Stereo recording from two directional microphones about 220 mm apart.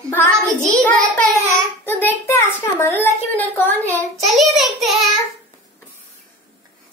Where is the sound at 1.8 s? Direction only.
10° left (ahead or behind).